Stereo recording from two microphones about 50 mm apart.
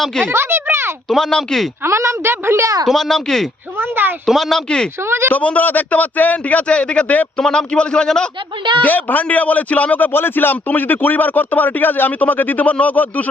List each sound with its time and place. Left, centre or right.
0.3 s a sound: right
1.0 s a man's voice: centre
1.8 s a woman's voice: right
2.3 s speech: right
2.8 s a man's voice: centre
3.8 s speech: right
4.3 s speech: centre
4.9 s speech: right
5.3 s a man's voice: left; by 8.2 s centre
8.8 s speech: left
10.1 s speech: left